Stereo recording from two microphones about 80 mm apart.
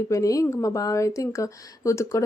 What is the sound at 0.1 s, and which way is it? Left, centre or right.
A woman's voice, left.